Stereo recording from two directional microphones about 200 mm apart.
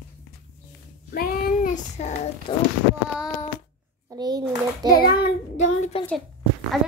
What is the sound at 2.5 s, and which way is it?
Speech, 20° left (ahead or behind).